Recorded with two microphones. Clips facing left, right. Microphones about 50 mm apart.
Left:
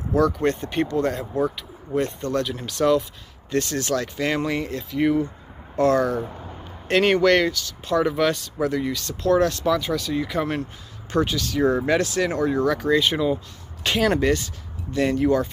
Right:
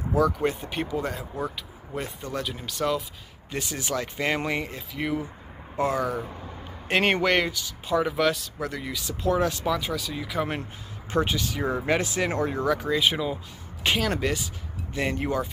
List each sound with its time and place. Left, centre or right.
0.1 s speech: centre
4.9 s speech: centre
6.9 s speech: right; by 10.4 s centre
10.6 s speech: right
12.6 s speech: centre
14.3 s speech: centre